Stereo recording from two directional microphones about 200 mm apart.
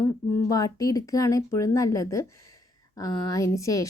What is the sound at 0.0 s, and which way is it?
A woman's voice, 15° left (ahead or behind).